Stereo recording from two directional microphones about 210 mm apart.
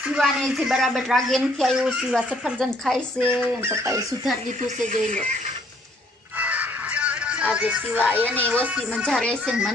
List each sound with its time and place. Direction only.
0.1 s speech: centre (ahead or behind)
3.2 s speech: 10° right (ahead or behind)
4.9 s speech: 35° right (ahead or behind)
6.4 s music: 5° right (ahead or behind)
8.2 s speech: 5° left (ahead or behind)
8.6 s speech: 5° right (ahead or behind)
9.0 s speech: 5° left (ahead or behind)